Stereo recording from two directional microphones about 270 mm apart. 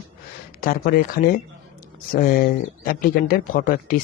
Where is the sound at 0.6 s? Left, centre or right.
Left.